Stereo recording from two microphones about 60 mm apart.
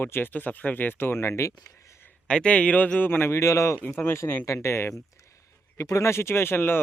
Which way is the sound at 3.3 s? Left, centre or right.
Left.